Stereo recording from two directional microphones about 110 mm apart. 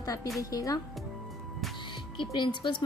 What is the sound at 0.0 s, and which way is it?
Speech, 30° left (ahead or behind).